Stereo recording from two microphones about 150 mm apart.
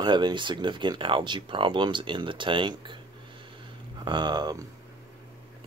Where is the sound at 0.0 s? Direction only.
30° right (ahead or behind).